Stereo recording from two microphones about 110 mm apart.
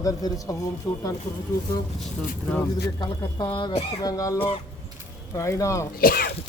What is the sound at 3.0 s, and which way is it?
Speech, 45° left (ahead or behind).